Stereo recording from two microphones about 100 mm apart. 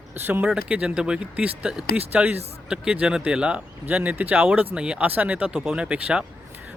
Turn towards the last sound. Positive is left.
turn(degrees=-10)  # may be behind; listen again after turning